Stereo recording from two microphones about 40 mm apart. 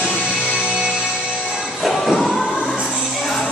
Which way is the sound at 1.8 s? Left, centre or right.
Centre.